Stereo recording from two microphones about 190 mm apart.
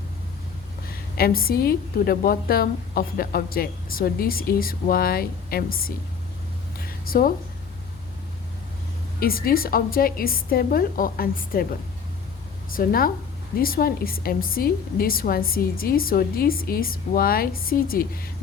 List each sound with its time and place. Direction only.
0.9 s a woman's voice: 50° left (ahead or behind)
6.7 s a sound: 50° left (ahead or behind)
9.2 s a woman's voice: 50° left (ahead or behind)
12.7 s a woman's voice: 50° left (ahead or behind)